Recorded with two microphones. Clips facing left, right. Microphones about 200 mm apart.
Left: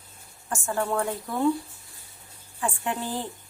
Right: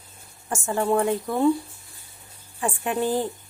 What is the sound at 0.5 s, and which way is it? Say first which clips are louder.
Speech: right 4 dB; 20° right (ahead or behind).